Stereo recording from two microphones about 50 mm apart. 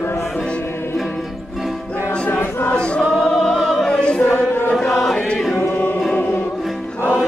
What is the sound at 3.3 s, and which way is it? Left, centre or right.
Opera, centre.